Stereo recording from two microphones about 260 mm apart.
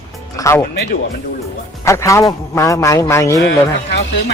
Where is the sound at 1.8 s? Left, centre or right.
Centre.